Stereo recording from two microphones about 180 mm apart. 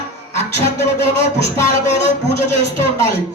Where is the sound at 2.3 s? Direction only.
15° left (ahead or behind).